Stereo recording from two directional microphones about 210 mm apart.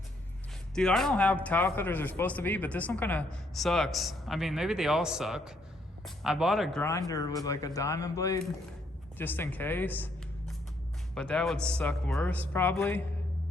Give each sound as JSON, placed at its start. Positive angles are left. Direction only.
{"t": 0.8, "sound": "speech", "side_deg": 0}
{"t": 7.1, "sound": "speech", "side_deg": 15}
{"t": 11.1, "sound": "speech", "side_deg": 5}